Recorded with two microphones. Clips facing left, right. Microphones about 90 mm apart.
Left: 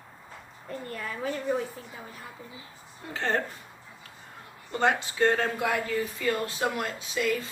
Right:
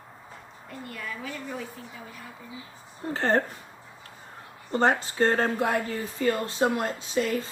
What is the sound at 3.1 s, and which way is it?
Speech, 40° right (ahead or behind).